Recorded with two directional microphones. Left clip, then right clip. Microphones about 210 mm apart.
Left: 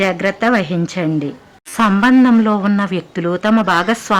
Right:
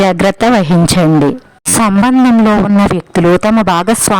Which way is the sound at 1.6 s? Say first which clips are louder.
Right 3 dB; 40° right (ahead or behind).